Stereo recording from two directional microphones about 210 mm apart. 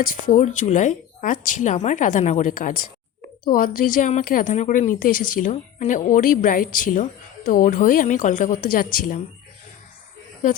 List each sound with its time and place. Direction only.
0.1 s a woman's voice: 40° left (ahead or behind)